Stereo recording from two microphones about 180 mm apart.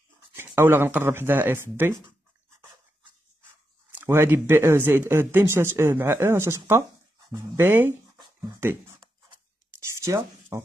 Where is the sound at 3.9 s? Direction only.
15° right (ahead or behind).